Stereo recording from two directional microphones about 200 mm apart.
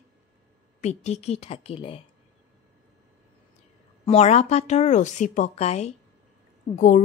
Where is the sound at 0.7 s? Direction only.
35° left (ahead or behind).